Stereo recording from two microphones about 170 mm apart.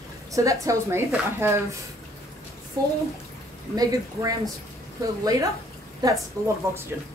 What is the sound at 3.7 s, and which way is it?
A woman's voice, 20° right (ahead or behind).